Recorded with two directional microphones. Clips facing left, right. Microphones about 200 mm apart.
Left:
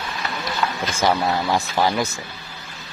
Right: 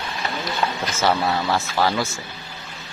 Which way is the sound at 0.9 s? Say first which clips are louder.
Left 1 dB; 15° left (ahead or behind).